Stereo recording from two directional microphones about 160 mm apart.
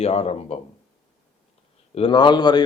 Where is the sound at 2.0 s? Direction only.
30° left (ahead or behind).